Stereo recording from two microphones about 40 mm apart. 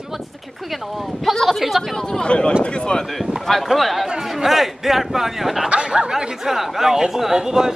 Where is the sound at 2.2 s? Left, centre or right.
Left.